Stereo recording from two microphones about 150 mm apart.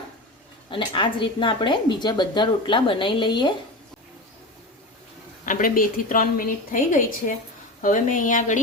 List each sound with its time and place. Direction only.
0.7 s a woman's voice: 35° left (ahead or behind)
5.5 s a woman's voice: 65° left (ahead or behind)